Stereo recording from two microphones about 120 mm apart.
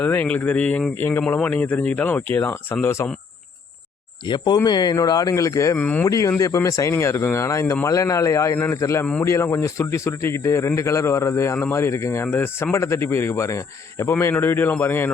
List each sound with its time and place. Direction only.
0.0 s speech: 15° left (ahead or behind)
4.3 s speech: 35° left (ahead or behind)
5.7 s speech: 15° left (ahead or behind)
6.1 s speech: 25° left (ahead or behind)